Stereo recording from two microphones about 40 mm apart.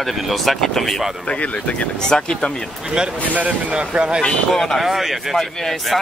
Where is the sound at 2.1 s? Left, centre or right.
Centre.